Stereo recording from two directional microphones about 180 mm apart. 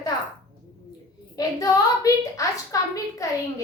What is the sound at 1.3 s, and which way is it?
A woman's voice, 20° left (ahead or behind).